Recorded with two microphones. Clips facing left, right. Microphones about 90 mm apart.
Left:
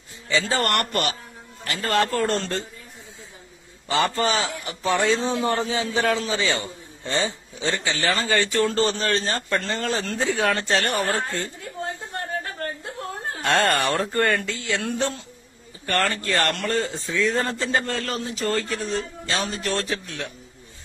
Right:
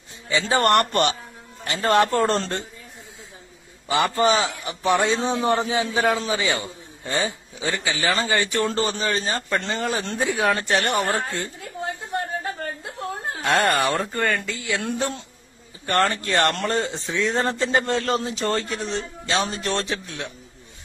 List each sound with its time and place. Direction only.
0.3 s a man's voice: 20° right (ahead or behind)
3.9 s a man's voice: 20° right (ahead or behind)
7.2 s speech: 25° left (ahead or behind)
7.7 s a man's voice: 10° right (ahead or behind)
13.3 s speech: 15° right (ahead or behind)
13.9 s speech: centre (ahead or behind)
14.8 s a man's voice: 20° right (ahead or behind)